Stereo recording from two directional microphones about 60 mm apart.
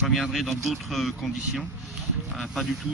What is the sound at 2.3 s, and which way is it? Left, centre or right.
Speech, centre.